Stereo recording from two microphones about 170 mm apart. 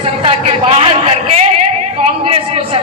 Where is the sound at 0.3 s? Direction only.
35° right (ahead or behind).